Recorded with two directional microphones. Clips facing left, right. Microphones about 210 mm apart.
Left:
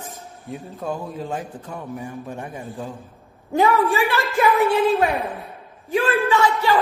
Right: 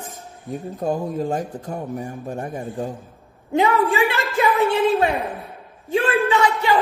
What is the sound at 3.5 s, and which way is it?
Speech, 20° right (ahead or behind).